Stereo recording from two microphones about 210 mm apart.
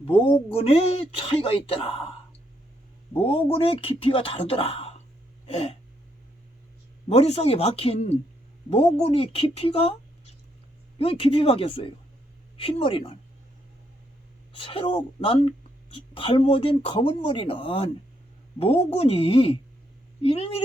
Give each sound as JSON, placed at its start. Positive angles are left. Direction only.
{"t": 0.5, "sound": "speech", "side_deg": 30}
{"t": 3.2, "sound": "speech", "side_deg": 25}
{"t": 5.5, "sound": "a sound", "side_deg": 25}
{"t": 7.1, "sound": "speech", "side_deg": 30}
{"t": 14.5, "sound": "speech", "side_deg": 25}